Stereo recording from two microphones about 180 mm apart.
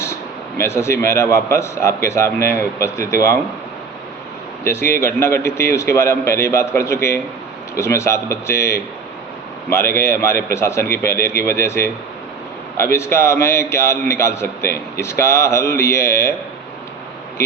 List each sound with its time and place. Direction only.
0.6 s a man's voice: 15° left (ahead or behind)
4.6 s a man's voice: 15° left (ahead or behind)